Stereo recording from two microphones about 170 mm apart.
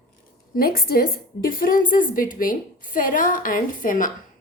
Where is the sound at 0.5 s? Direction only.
60° left (ahead or behind).